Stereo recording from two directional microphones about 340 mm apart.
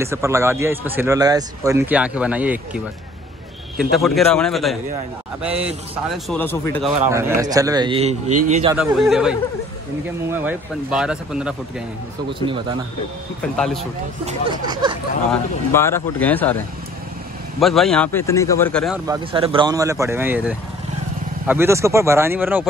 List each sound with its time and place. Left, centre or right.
0.0 s speech: centre
3.9 s speech: centre
6.0 s a man's voice: centre
8.7 s speech: centre
14.2 s speech: centre
15.7 s speech: centre
19.0 s speech: centre